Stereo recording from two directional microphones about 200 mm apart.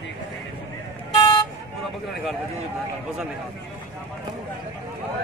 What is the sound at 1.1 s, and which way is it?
Vehicle, 20° left (ahead or behind).